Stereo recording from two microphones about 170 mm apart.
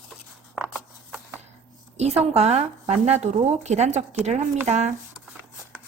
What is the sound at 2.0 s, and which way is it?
Speech, 40° right (ahead or behind).